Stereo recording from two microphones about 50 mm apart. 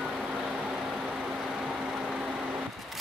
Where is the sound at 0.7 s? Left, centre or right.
Centre.